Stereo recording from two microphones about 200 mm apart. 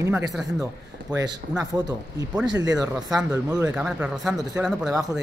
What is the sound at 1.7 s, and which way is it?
Speech, 20° right (ahead or behind).